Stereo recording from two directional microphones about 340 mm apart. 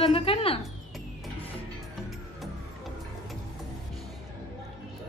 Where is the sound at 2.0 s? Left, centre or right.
Centre.